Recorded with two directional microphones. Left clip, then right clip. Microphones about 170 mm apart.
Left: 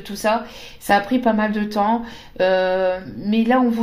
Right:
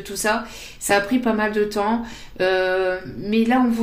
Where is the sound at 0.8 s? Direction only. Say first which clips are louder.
Left 2 dB; 30° left (ahead or behind).